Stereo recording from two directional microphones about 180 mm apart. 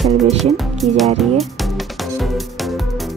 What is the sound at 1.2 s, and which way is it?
Music, centre (ahead or behind).